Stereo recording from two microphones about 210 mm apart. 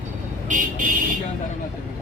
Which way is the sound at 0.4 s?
40° right (ahead or behind).